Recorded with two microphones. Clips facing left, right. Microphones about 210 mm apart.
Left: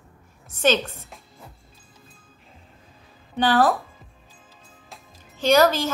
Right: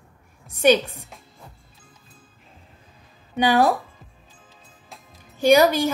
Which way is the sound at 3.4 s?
10° right (ahead or behind).